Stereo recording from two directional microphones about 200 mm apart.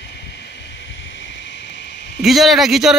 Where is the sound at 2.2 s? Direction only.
Centre (ahead or behind).